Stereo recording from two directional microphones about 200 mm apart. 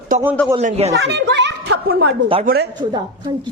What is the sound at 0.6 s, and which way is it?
Speech, 35° right (ahead or behind).